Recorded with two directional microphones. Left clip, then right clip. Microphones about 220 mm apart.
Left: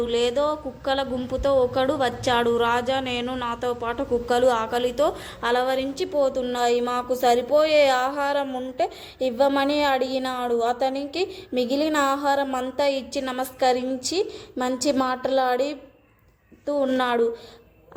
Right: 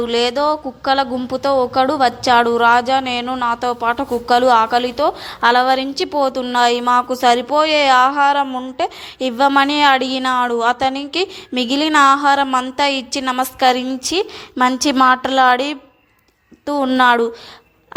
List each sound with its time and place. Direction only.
0.0 s a woman's voice: 25° right (ahead or behind)